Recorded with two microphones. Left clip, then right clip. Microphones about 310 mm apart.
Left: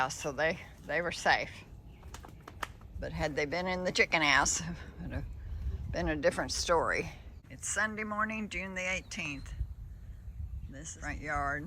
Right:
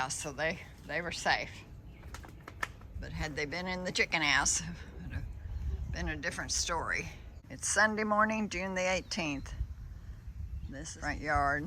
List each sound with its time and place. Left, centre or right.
0.0 s speech: centre
2.1 s bird flight: centre
3.0 s speech: centre
10.7 s speech: centre